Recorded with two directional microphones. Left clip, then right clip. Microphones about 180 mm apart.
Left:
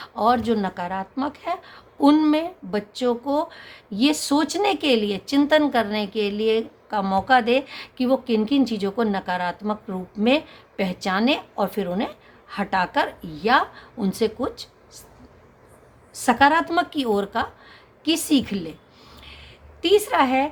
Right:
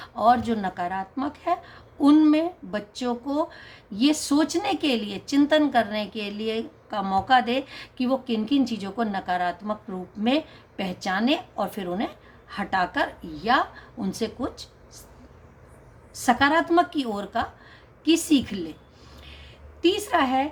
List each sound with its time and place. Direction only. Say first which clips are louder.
0.0 s speech: even; 30° left (ahead or behind)
16.1 s speech: left 3 dB; 30° left (ahead or behind)
19.2 s a sound: left 3 dB; 40° left (ahead or behind)